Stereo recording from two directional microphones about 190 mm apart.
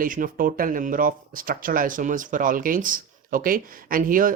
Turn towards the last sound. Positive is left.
turn(degrees=-45)  # may be behind; listen again after turning